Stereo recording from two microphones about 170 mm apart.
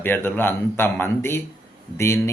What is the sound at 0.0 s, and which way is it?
A man's voice, 10° left (ahead or behind).